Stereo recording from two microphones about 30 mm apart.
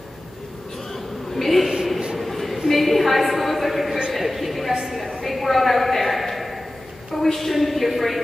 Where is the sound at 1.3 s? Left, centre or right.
Centre.